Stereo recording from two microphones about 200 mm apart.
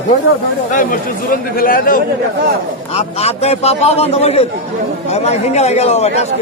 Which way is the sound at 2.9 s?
30° left (ahead or behind).